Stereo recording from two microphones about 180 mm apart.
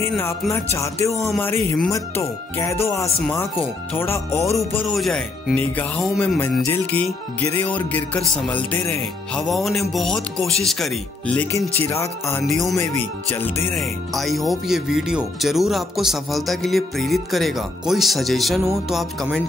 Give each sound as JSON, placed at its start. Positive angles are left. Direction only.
{"t": 0.0, "sound": "speech", "side_deg": 15}
{"t": 4.8, "sound": "speech", "side_deg": 0}
{"t": 11.9, "sound": "speech", "side_deg": 15}
{"t": 13.7, "sound": "speech", "side_deg": 0}